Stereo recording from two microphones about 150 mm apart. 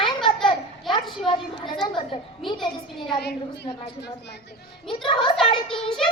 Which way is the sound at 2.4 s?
Centre (ahead or behind).